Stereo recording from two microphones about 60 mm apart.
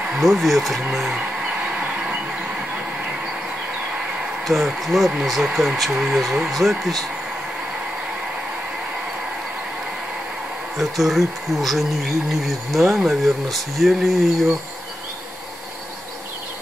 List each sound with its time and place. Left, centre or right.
0.2 s speech: centre
0.8 s speech: centre
1.7 s a sound: right
4.5 s speech: centre
10.8 s speech: centre